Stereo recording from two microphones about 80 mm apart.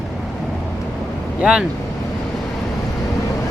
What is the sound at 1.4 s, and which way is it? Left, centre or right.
Speech, centre.